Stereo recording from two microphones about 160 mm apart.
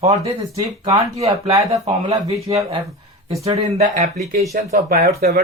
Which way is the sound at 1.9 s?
40° right (ahead or behind).